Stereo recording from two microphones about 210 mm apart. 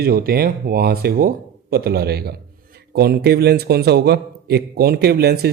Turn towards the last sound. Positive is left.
turn(degrees=-50)  # may be behind; listen again after turning